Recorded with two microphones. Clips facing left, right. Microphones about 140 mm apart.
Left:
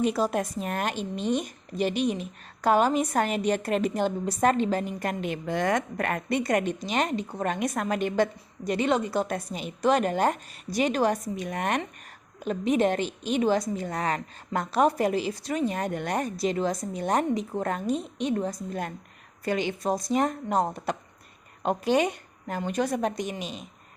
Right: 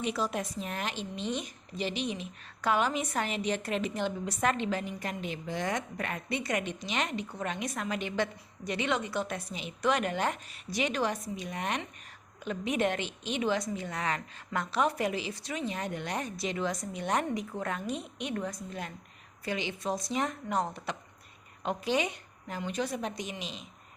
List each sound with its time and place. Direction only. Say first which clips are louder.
0.0 s a woman's voice: left 7 dB; 40° left (ahead or behind)
12.4 s a woman's voice: left 6 dB; 35° left (ahead or behind)
19.5 s a woman's voice: left 6 dB; 45° left (ahead or behind)